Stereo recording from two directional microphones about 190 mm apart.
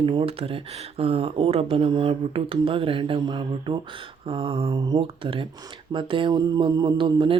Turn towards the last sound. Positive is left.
turn(degrees=-25)  # may be behind; listen again after turning